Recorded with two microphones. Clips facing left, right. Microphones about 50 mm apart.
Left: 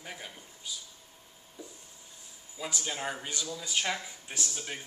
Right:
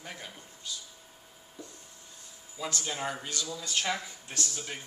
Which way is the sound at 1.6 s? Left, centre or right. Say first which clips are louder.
Even; centre.